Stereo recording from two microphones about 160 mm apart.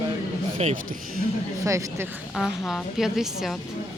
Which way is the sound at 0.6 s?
40° right (ahead or behind).